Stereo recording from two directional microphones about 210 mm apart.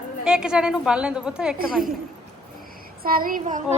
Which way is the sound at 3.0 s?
45° right (ahead or behind).